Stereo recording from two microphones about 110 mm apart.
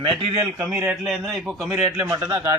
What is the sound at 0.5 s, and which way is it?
Speech, 20° right (ahead or behind).